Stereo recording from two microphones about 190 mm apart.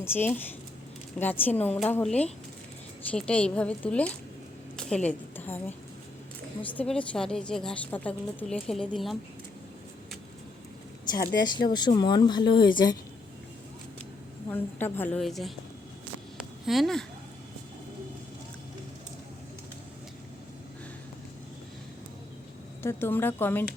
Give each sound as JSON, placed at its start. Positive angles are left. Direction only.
{"t": 0.0, "sound": "a woman's voice", "side_deg": 10}
{"t": 11.2, "sound": "a woman's voice", "side_deg": 65}
{"t": 11.4, "sound": "speech", "side_deg": 20}
{"t": 14.5, "sound": "a woman's voice", "side_deg": 10}
{"t": 16.4, "sound": "a sound", "side_deg": 0}
{"t": 22.8, "sound": "a woman's voice", "side_deg": 10}